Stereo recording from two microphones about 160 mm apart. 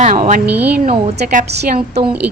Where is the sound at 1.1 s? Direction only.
75° right (ahead or behind).